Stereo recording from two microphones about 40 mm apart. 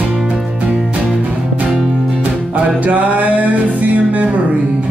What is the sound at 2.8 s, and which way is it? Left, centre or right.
Music, right.